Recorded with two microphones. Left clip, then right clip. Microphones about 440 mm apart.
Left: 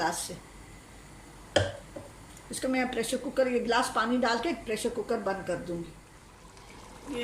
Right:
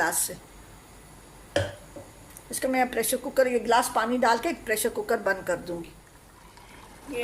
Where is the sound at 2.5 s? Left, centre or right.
Centre.